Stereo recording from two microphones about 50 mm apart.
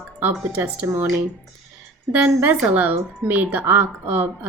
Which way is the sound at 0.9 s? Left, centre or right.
Right.